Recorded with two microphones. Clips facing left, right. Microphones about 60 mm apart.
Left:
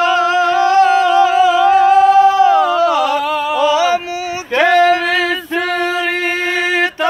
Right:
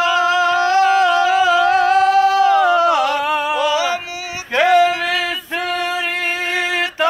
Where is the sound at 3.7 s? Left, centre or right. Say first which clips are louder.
Left 5 dB; left.